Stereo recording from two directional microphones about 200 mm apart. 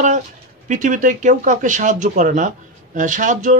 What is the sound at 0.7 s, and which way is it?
Speech, 40° right (ahead or behind).